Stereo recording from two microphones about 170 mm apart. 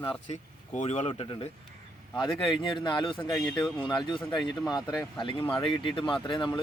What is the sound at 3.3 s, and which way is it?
Speech, 20° left (ahead or behind).